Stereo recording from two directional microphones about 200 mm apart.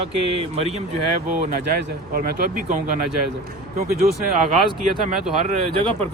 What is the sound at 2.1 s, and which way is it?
Speech, 45° right (ahead or behind).